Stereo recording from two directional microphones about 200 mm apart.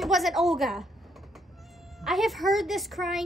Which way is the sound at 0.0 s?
Centre (ahead or behind).